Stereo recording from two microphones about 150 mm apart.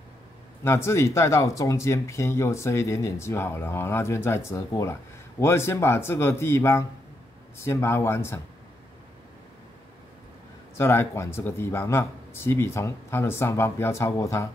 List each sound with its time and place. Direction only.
0.7 s speech: 15° left (ahead or behind)
10.8 s speech: 15° left (ahead or behind)